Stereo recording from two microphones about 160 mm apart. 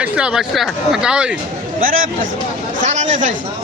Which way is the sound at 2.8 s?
50° right (ahead or behind).